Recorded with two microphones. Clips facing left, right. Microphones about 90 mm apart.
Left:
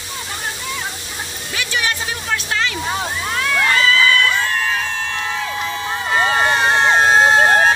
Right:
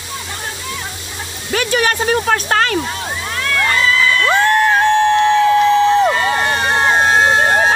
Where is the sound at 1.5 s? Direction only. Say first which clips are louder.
Right 7 dB; 45° right (ahead or behind).